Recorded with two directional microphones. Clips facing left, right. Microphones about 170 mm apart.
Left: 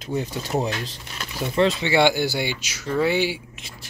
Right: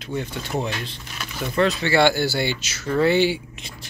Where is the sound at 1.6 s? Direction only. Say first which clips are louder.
Even; 20° left (ahead or behind); by 3.9 s 5° left (ahead or behind).